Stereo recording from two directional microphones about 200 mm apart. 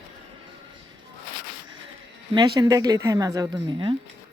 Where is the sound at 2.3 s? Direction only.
20° right (ahead or behind).